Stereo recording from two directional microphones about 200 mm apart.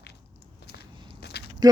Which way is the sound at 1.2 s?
55° left (ahead or behind).